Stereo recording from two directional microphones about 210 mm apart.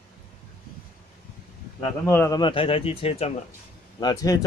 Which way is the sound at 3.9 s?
15° left (ahead or behind).